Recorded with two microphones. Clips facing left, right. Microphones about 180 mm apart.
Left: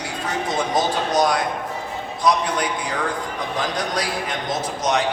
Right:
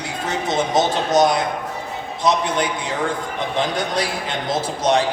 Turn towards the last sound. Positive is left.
turn(degrees=-30)  # may be behind; listen again after turning